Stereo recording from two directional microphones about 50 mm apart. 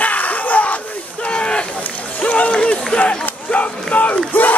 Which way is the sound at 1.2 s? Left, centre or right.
Left.